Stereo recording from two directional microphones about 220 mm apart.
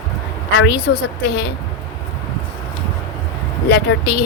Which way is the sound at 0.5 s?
50° left (ahead or behind).